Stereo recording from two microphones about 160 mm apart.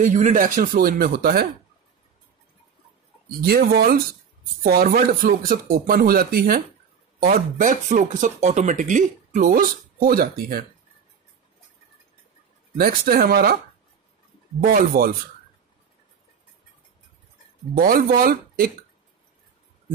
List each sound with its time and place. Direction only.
0.1 s speech: 55° right (ahead or behind); by 1.5 s 70° right (ahead or behind)
3.4 s speech: 70° right (ahead or behind)
4.6 s speech: 65° right (ahead or behind)
12.7 s speech: 70° right (ahead or behind)
14.6 s speech: 65° right (ahead or behind)
17.7 s speech: 65° right (ahead or behind)